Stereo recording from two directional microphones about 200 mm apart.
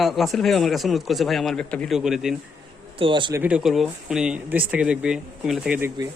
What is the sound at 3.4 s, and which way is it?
Speech, 5° right (ahead or behind).